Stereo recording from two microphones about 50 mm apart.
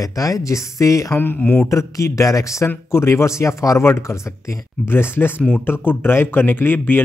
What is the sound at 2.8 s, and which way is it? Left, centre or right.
Speech, left.